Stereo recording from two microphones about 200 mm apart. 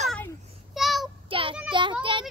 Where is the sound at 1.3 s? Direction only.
25° right (ahead or behind).